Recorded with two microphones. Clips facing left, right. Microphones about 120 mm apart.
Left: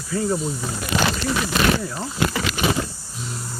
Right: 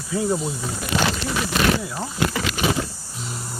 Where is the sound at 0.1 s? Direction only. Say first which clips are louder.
Even; 10° right (ahead or behind).